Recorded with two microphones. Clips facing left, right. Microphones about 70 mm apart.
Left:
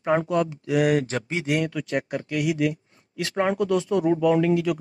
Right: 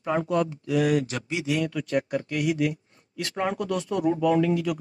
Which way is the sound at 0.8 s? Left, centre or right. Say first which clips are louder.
Left 2 dB; left.